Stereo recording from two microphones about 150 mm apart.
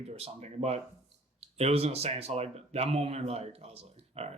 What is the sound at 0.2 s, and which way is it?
Speech, 45° right (ahead or behind).